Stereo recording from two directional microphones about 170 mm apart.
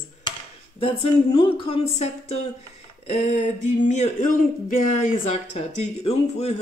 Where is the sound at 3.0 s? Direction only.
40° left (ahead or behind).